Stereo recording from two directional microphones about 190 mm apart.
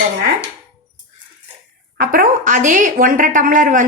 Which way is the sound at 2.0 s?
45° right (ahead or behind).